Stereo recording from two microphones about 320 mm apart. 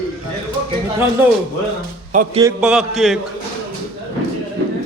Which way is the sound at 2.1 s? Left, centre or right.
Right.